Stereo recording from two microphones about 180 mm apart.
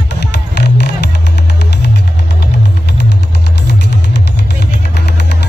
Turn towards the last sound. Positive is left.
turn(degrees=70)  # may be behind; listen again after turning